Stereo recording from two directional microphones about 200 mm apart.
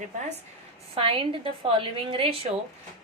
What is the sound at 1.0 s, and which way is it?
A woman's voice, 25° right (ahead or behind).